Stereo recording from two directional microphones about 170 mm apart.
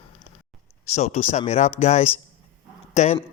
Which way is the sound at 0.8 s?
40° left (ahead or behind).